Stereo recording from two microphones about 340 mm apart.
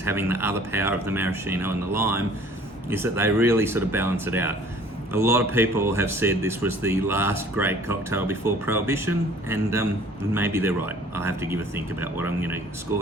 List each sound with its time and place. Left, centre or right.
0.0 s speech: centre